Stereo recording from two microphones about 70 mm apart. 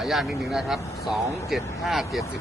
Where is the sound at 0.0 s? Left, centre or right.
Centre.